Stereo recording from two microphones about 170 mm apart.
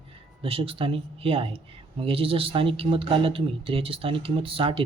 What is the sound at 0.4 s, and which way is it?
Speech, 30° right (ahead or behind).